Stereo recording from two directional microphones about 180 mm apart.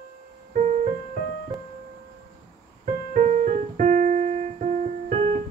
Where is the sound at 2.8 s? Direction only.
45° right (ahead or behind).